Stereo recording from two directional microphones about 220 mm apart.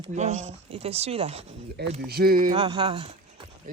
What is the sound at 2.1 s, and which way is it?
Speech, 45° right (ahead or behind).